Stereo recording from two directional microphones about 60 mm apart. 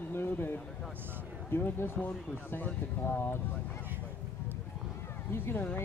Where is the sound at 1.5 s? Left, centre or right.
Left.